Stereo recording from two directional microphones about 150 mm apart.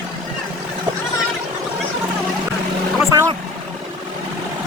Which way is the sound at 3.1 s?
25° right (ahead or behind).